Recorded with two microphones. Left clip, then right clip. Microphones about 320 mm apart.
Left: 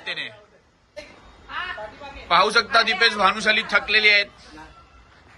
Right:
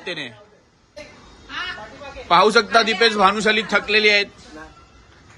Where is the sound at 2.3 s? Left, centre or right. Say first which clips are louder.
Right 3 dB; centre.